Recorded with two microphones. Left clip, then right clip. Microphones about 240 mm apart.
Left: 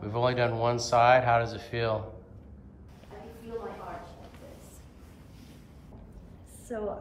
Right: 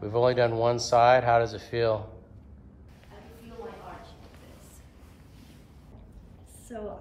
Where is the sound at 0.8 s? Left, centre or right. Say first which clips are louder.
Right 1 dB; right.